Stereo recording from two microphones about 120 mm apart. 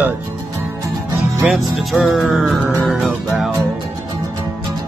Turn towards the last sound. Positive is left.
turn(degrees=0)  # may be behind; listen again after turning